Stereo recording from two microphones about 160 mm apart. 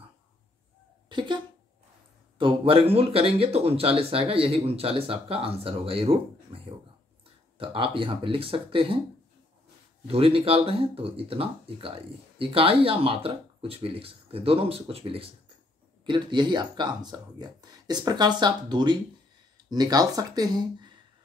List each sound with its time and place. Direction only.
1.0 s speech: 30° right (ahead or behind)
10.0 s speech: 35° right (ahead or behind)